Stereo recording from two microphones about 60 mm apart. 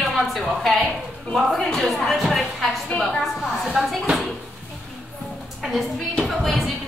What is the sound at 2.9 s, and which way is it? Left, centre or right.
Speech, left.